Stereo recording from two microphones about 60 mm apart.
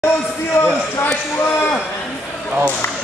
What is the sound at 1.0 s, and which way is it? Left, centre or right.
Speech, left.